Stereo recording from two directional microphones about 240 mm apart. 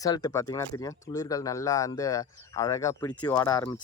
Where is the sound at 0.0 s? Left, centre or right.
Centre.